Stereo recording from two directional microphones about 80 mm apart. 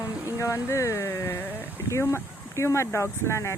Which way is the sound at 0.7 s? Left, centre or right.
Left.